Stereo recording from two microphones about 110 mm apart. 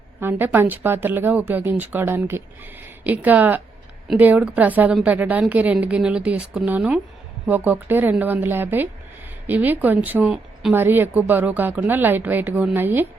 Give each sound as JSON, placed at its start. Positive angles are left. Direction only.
{"t": 0.2, "sound": "a woman's voice", "side_deg": -20}